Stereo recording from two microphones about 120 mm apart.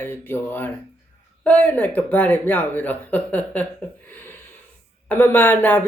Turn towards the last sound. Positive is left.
turn(degrees=15)  # may be behind; listen again after turning